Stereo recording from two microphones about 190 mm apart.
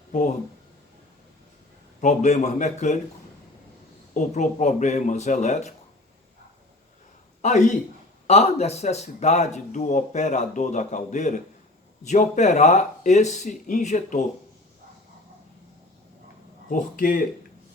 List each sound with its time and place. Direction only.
2.0 s speech: 40° left (ahead or behind)
4.1 s speech: 40° left (ahead or behind)
7.4 s speech: 40° left (ahead or behind)
16.6 s speech: 45° left (ahead or behind)